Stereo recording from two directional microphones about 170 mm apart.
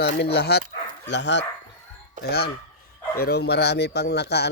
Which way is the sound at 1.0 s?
90° left.